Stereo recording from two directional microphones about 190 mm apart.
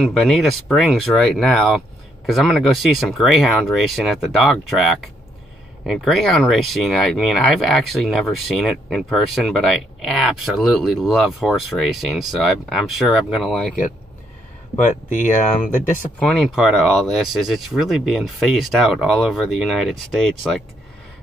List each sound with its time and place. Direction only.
0.0 s speech: centre (ahead or behind)
14.8 s speech: 40° left (ahead or behind)
16.2 s speech: centre (ahead or behind)